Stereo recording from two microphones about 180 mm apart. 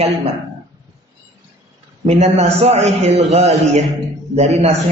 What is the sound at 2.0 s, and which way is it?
A man's voice, 35° right (ahead or behind).